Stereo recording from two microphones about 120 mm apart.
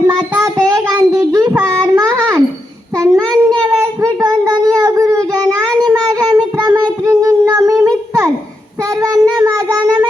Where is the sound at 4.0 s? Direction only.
25° right (ahead or behind).